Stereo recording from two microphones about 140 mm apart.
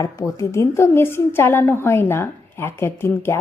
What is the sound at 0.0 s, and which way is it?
A woman's voice, 20° left (ahead or behind).